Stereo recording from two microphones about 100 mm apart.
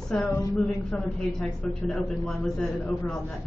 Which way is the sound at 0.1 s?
10° left (ahead or behind).